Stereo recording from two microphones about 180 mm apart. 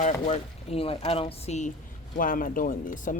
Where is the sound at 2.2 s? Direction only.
50° left (ahead or behind).